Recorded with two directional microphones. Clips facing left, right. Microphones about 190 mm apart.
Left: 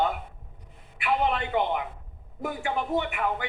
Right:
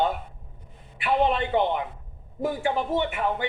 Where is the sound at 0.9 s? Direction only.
25° right (ahead or behind).